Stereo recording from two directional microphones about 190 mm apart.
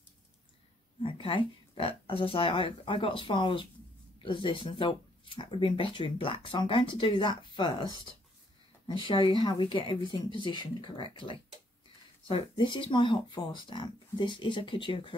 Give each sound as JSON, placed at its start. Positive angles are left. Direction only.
{"t": 1.0, "sound": "speech", "side_deg": 25}
{"t": 12.3, "sound": "speech", "side_deg": 25}